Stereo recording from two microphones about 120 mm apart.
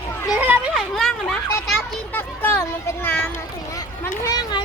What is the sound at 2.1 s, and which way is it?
A child's voice, 15° left (ahead or behind).